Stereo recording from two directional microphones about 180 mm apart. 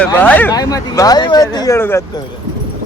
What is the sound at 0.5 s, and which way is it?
Speech, 20° left (ahead or behind).